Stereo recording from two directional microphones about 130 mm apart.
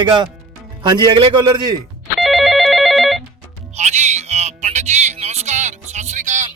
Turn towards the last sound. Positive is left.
turn(degrees=-65)  # may be behind; listen again after turning